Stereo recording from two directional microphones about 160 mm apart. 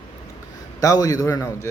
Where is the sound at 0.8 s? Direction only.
20° left (ahead or behind).